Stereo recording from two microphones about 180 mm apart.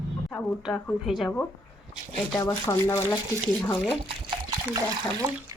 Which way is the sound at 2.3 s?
15° left (ahead or behind).